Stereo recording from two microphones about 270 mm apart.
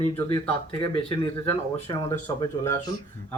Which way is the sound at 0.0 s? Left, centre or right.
Centre.